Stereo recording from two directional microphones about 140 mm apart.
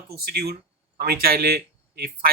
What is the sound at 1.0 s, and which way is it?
Speech, 90° right.